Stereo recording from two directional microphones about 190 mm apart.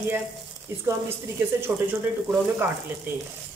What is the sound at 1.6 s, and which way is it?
Speech, 10° right (ahead or behind).